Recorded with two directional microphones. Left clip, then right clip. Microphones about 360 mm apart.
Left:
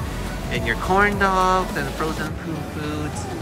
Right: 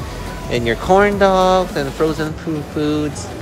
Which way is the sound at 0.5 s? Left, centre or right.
Centre.